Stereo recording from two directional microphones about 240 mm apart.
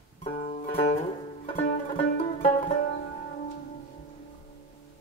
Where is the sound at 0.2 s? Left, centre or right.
Left.